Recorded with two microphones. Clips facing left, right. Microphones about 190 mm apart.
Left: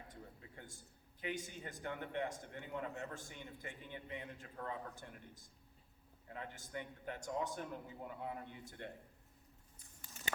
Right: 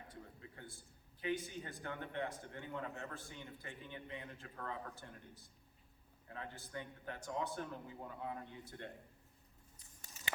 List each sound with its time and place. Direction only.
0.1 s a man's voice: 20° left (ahead or behind)